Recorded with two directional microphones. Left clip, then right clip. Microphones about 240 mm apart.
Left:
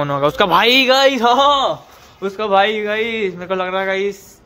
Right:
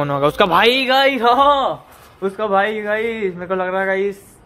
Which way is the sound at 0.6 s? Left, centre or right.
Left.